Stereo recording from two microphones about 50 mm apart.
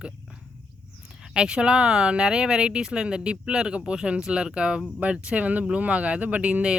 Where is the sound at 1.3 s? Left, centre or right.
Centre.